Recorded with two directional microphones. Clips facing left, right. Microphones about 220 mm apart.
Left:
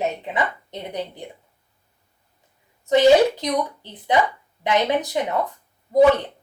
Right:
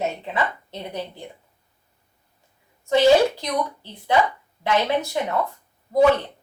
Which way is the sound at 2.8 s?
20° left (ahead or behind).